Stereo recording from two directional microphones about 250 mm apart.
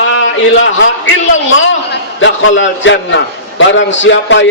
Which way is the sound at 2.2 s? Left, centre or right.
Left.